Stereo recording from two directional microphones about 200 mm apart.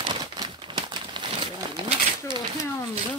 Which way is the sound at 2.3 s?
25° right (ahead or behind).